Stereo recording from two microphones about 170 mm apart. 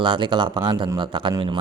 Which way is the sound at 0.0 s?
25° right (ahead or behind).